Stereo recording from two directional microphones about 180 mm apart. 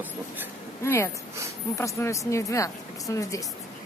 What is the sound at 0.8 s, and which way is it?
A woman's voice, 15° left (ahead or behind).